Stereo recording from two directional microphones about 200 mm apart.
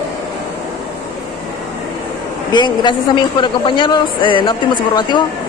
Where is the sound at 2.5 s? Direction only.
20° left (ahead or behind).